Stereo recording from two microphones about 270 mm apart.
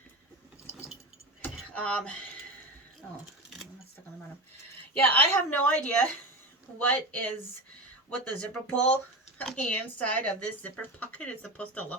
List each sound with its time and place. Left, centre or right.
1.4 s a sound: centre
5.0 s speech: centre
8.4 s speech: centre